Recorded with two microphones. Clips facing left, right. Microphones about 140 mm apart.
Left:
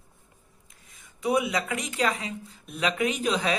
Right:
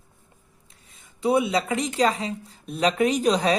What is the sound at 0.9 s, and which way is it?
Speech, 30° right (ahead or behind).